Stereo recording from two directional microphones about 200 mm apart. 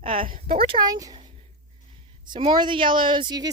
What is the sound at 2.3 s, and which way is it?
Speech, 20° right (ahead or behind).